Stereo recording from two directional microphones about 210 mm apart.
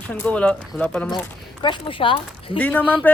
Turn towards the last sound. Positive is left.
turn(degrees=5)  # may be behind; listen again after turning